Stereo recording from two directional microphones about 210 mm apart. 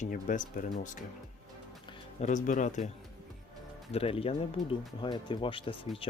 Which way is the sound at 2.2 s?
35° left (ahead or behind).